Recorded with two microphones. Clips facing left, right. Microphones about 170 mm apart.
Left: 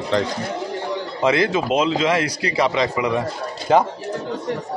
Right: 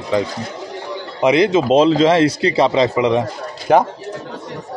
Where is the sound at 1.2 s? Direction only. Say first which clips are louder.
Right 5 dB; 20° right (ahead or behind).